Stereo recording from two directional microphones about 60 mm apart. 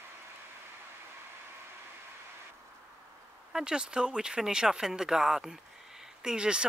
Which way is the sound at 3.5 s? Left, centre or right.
Centre.